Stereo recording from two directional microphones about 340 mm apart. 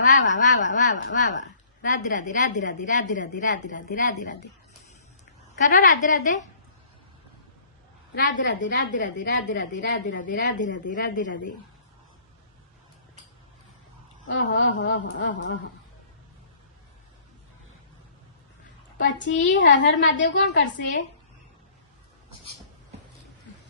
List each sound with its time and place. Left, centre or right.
0.1 s a woman's voice: left
5.6 s a woman's voice: left
8.1 s a woman's voice: left
14.3 s a woman's voice: left
18.9 s a woman's voice: left